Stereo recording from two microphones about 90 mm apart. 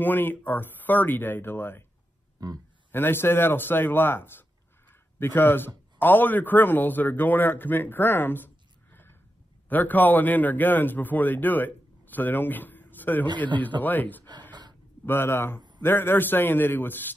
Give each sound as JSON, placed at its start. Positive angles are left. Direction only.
{"t": 0.0, "sound": "a man's voice", "side_deg": 20}
{"t": 2.4, "sound": "speech", "side_deg": -45}
{"t": 2.9, "sound": "a man's voice", "side_deg": 25}
{"t": 9.7, "sound": "a man's voice", "side_deg": 20}